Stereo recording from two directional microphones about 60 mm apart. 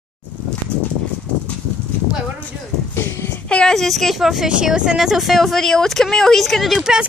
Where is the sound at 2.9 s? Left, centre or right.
Left.